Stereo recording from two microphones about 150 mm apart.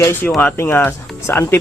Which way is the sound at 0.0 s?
15° left (ahead or behind).